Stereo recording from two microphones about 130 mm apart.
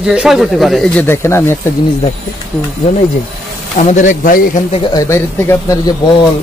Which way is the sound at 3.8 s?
70° left (ahead or behind).